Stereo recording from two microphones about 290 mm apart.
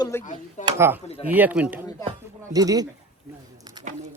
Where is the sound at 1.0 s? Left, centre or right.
Left.